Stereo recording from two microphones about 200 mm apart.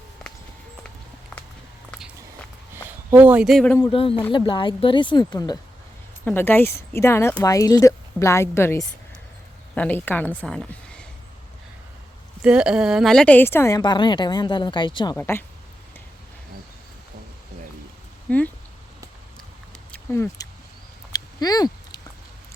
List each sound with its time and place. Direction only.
2.7 s speech: 10° right (ahead or behind); by 3.8 s 5° left (ahead or behind)
3.8 s a woman's voice: 25° left (ahead or behind); by 11.0 s 5° left (ahead or behind)
12.4 s a woman's voice: 5° right (ahead or behind); by 15.1 s 25° left (ahead or behind)
15.1 s a woman's voice: 10° left (ahead or behind)
18.3 s speech: 5° left (ahead or behind)
19.9 s a sound: 10° left (ahead or behind)